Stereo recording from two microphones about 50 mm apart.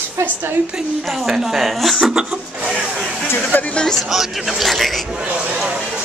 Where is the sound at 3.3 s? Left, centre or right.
Left.